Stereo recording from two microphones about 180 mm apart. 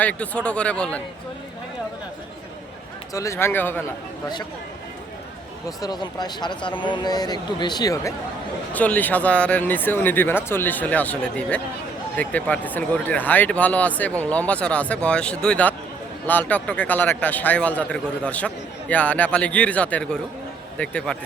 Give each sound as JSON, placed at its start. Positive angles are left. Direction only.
{"t": 0.0, "sound": "speech", "side_deg": 5}
{"t": 3.1, "sound": "speech", "side_deg": 15}
{"t": 5.6, "sound": "speech", "side_deg": 20}
{"t": 8.7, "sound": "speech", "side_deg": 10}